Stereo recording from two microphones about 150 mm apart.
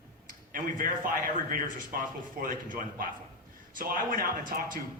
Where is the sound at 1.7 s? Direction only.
65° right (ahead or behind).